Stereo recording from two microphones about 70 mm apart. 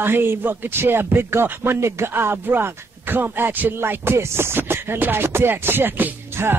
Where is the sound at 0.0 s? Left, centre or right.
Right.